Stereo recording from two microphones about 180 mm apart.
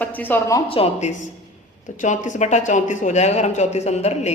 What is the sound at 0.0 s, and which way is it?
Speech, 10° left (ahead or behind).